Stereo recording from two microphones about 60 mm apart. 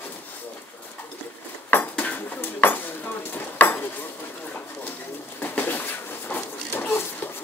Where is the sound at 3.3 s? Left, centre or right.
Left.